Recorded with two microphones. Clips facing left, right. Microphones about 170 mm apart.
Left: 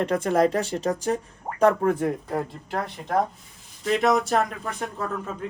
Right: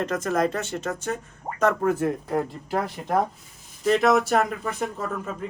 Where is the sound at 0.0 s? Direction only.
30° left (ahead or behind).